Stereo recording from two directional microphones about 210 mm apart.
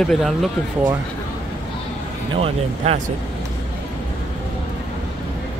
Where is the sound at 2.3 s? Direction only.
30° right (ahead or behind).